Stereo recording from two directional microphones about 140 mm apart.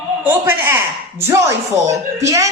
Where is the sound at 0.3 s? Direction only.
15° right (ahead or behind).